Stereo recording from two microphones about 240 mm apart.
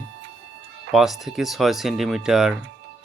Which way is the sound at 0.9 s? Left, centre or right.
Centre.